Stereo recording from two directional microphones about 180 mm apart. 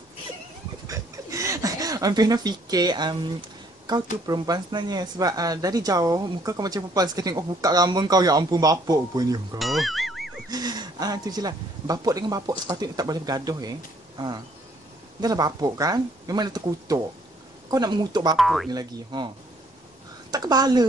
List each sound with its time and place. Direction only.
0.8 s a sound: 20° right (ahead or behind)
4.3 s speech: 25° right (ahead or behind)
9.6 s music: centre (ahead or behind)
10.5 s speech: 20° right (ahead or behind)
18.3 s speech: centre (ahead or behind)
18.7 s speech: 25° right (ahead or behind)